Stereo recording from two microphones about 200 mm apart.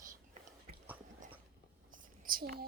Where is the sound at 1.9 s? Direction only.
45° right (ahead or behind).